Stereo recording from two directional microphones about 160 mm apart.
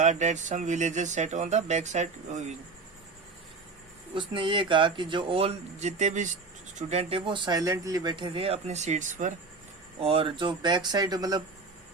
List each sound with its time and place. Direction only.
0.0 s speech: 45° right (ahead or behind)
4.1 s speech: 30° right (ahead or behind); by 9.3 s 50° right (ahead or behind)
10.0 s speech: 35° right (ahead or behind)